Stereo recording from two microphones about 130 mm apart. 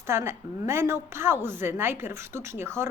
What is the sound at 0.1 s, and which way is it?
A woman's voice, 20° right (ahead or behind).